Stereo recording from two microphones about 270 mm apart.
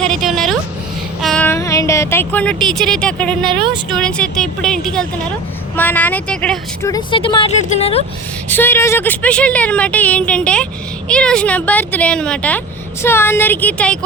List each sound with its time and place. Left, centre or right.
0.0 s a sound: centre
1.2 s speech: centre
3.6 s speech: centre
3.9 s speech: centre; by 8.0 s left
8.4 s speech: centre